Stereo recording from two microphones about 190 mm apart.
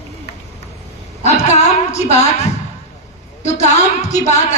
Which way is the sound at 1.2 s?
35° left (ahead or behind).